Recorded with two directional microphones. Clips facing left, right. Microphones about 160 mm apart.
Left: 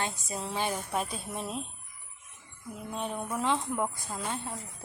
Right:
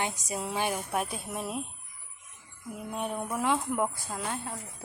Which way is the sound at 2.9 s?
10° right (ahead or behind).